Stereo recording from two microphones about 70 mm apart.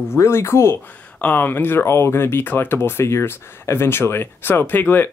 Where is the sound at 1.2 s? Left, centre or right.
Left.